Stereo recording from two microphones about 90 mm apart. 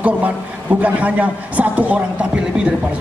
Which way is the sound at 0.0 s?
15° right (ahead or behind).